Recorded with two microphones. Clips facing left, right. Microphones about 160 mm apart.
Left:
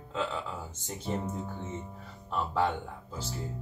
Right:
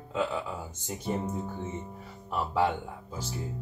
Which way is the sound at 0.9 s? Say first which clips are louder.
Right 2 dB; 10° right (ahead or behind).